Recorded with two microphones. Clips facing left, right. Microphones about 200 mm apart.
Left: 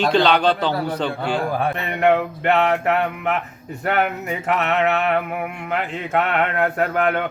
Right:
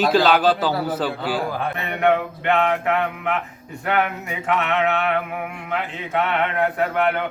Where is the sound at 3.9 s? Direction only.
40° left (ahead or behind).